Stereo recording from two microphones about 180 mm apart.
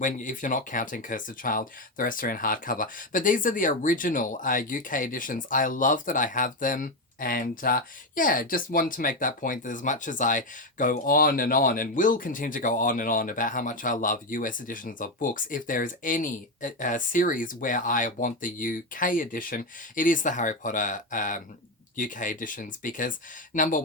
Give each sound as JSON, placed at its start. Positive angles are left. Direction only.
{"t": 0.0, "sound": "speech", "side_deg": 45}